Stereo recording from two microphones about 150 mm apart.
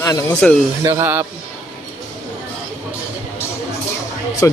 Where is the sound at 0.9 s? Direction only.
15° right (ahead or behind).